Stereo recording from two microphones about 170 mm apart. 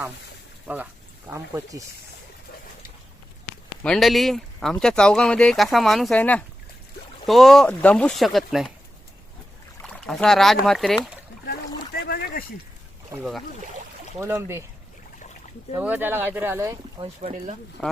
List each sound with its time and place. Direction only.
1.3 s speech: 15° right (ahead or behind)
3.8 s speech: centre (ahead or behind)
9.8 s speech: 5° left (ahead or behind)
11.9 s a sound: 65° left (ahead or behind)
14.2 s speech: 15° right (ahead or behind)
15.8 s speech: 10° right (ahead or behind)
17.2 s speech: 45° right (ahead or behind)
17.8 s speech: 5° left (ahead or behind)